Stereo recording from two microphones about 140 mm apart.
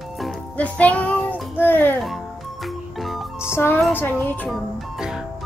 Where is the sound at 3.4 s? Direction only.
15° left (ahead or behind).